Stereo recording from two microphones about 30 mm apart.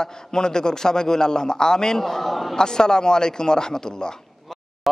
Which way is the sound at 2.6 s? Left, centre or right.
Left.